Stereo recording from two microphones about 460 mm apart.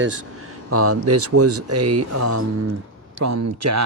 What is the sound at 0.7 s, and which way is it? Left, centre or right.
Speech, right.